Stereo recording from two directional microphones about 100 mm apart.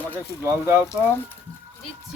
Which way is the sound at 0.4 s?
25° right (ahead or behind).